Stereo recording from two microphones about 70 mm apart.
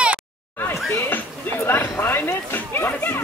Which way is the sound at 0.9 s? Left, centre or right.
Left.